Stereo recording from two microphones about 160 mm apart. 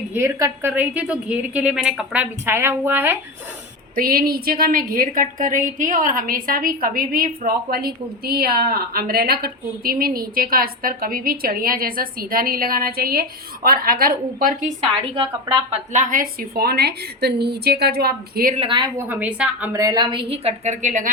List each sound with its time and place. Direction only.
0.1 s a woman's voice: 15° right (ahead or behind)
3.9 s a woman's voice: 65° right (ahead or behind)
15.1 s a woman's voice: 30° right (ahead or behind)
15.9 s a woman's voice: 50° right (ahead or behind); by 18.5 s 75° right (ahead or behind)
18.5 s a woman's voice: 35° right (ahead or behind)
18.9 s a woman's voice: 10° right (ahead or behind)
19.7 s a woman's voice: 20° right (ahead or behind); by 21.1 s 50° right (ahead or behind)